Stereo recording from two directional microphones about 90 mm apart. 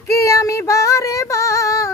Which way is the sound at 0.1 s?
35° left (ahead or behind).